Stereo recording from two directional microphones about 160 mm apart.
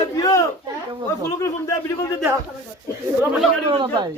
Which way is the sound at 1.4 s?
20° left (ahead or behind).